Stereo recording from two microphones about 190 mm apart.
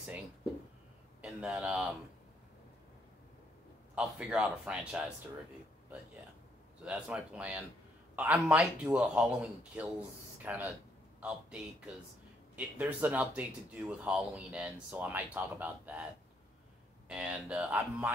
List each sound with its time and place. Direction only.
1.2 s speech: 5° right (ahead or behind)
3.9 s a man's voice: 5° right (ahead or behind)
6.8 s a man's voice: 5° right (ahead or behind)
17.1 s speech: 5° right (ahead or behind)